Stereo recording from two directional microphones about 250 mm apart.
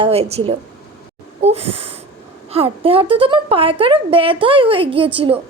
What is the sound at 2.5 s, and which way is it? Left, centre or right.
A woman's voice, right.